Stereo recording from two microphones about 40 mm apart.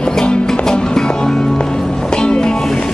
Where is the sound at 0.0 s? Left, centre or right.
Left.